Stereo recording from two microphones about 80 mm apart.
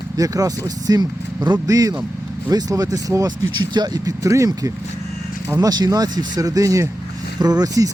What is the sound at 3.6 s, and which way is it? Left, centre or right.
Speech, right.